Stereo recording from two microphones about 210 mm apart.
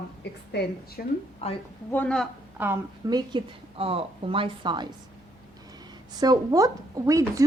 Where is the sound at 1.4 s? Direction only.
30° left (ahead or behind).